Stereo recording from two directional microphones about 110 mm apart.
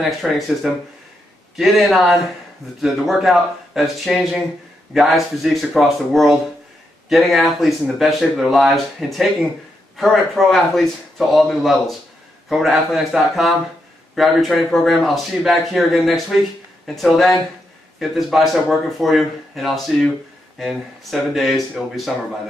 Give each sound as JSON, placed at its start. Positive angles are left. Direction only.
{"t": 0.2, "sound": "speech", "side_deg": 0}